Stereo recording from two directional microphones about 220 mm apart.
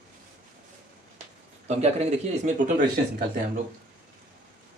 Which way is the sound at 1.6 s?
30° right (ahead or behind).